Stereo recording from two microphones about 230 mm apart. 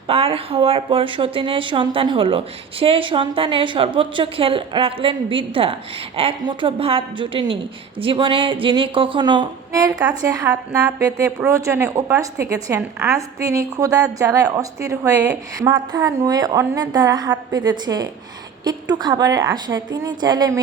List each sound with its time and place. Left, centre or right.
0.1 s a woman's voice: right